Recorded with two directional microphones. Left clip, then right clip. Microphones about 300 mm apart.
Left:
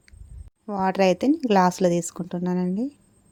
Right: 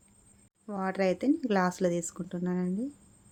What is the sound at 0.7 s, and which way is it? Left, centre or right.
A woman's voice, centre.